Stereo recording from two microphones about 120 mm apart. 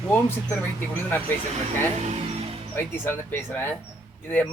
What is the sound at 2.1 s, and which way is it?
Music, 60° right (ahead or behind).